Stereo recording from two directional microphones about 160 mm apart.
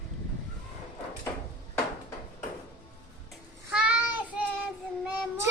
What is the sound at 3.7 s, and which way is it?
Child singing, 10° right (ahead or behind).